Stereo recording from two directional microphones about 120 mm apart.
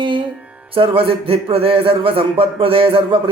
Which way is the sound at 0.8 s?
50° right (ahead or behind).